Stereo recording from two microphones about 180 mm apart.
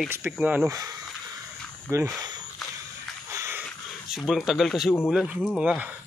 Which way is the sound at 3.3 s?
15° right (ahead or behind).